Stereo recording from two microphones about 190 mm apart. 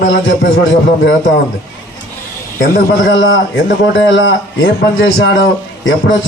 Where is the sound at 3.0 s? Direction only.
85° left.